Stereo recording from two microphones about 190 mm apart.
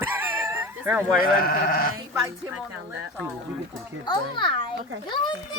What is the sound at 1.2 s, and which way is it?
Speech, 50° left (ahead or behind).